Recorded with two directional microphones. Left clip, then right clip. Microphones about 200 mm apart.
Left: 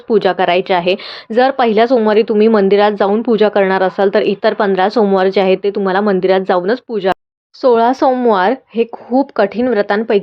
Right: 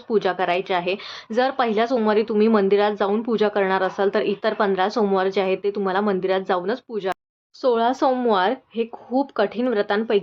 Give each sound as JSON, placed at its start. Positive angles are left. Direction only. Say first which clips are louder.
{"t": 0.1, "sound": "a woman's voice", "louder": "left 9 dB", "side_deg": 25}